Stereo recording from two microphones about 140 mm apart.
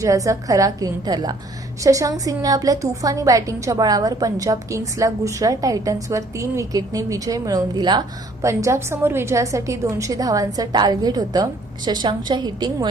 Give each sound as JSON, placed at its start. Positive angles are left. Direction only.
{"t": 0.0, "sound": "a woman's voice", "side_deg": -25}